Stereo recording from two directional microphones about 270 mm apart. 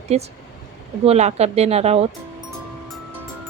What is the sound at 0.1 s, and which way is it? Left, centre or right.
Speech, right.